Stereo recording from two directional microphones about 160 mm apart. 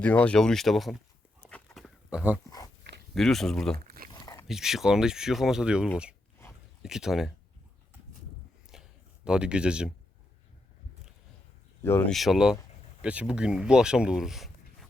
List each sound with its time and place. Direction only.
0.0 s speech: 10° left (ahead or behind)
1.5 s dog: 5° left (ahead or behind)
3.2 s speech: centre (ahead or behind)
3.8 s a sound: 65° right (ahead or behind)
4.1 s dog: 25° left (ahead or behind)
4.4 s speech: centre (ahead or behind)
8.7 s a sound: 5° right (ahead or behind)
11.8 s speech: 15° left (ahead or behind)
12.1 s speech: centre (ahead or behind)